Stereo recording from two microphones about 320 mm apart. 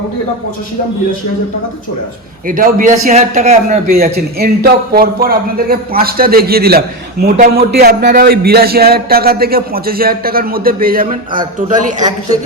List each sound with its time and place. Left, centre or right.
2.5 s a man's voice: right